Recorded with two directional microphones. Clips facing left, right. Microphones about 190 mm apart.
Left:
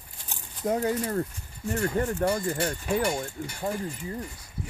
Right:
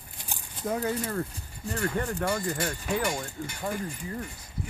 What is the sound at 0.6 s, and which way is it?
Speech, 25° left (ahead or behind).